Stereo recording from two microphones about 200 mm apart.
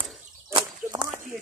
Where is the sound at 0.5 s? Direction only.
20° right (ahead or behind).